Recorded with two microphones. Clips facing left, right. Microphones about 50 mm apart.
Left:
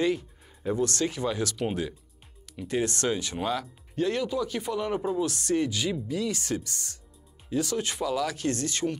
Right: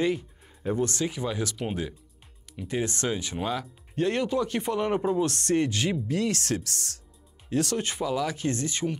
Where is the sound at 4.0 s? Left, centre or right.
Right.